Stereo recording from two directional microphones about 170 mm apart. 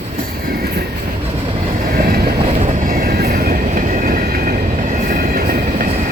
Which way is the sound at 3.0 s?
60° right (ahead or behind).